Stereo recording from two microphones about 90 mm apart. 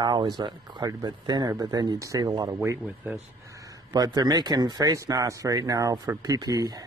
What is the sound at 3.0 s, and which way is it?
Speech, 20° right (ahead or behind).